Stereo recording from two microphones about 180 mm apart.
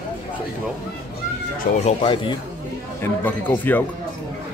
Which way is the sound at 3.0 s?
10° left (ahead or behind).